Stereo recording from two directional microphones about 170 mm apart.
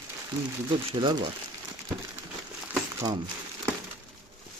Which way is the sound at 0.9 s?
30° right (ahead or behind).